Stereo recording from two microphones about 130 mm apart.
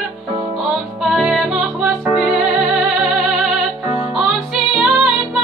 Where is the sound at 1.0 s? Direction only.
Centre (ahead or behind).